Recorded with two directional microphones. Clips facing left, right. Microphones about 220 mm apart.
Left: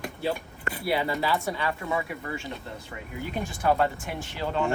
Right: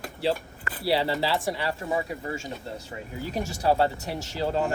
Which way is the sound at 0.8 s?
30° right (ahead or behind).